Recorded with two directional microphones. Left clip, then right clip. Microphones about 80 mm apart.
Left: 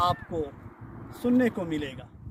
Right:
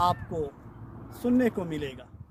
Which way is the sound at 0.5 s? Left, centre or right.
Centre.